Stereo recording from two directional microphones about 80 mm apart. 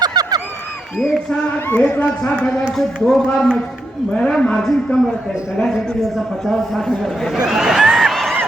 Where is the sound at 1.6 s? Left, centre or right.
Centre.